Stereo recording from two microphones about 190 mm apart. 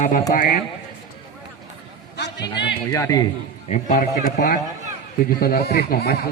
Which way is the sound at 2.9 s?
15° left (ahead or behind).